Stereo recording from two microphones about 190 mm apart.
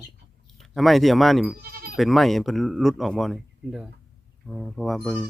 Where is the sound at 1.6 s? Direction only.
55° right (ahead or behind).